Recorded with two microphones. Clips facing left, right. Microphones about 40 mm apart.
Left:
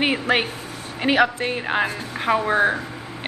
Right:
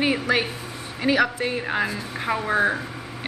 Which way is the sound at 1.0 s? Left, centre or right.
Left.